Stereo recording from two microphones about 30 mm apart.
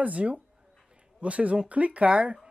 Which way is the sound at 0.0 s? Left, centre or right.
Right.